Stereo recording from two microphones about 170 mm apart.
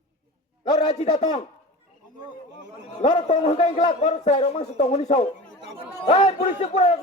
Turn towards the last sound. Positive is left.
turn(degrees=40)  # may be behind; listen again after turning